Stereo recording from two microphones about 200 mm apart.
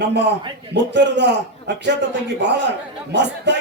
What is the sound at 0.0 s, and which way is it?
A man's voice, 60° right (ahead or behind).